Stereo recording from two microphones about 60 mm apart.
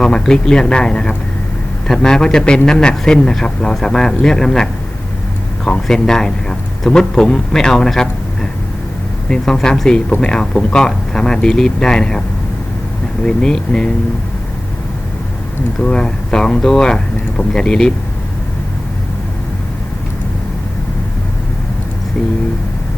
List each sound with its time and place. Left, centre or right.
0.0 s speech: centre
9.3 s speech: centre
13.2 s speech: centre
15.8 s speech: centre